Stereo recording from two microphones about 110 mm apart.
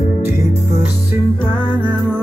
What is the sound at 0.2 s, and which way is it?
Music, 25° right (ahead or behind).